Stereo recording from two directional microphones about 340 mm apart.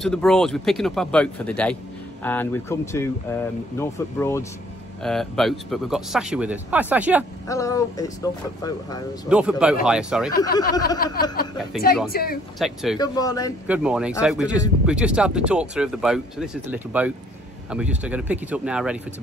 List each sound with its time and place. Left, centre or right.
0.0 s speech: centre
7.4 s speech: centre
9.3 s speech: centre
10.4 s speech: centre
11.0 s speech: left
12.5 s speech: centre
12.9 s speech: centre
13.7 s speech: centre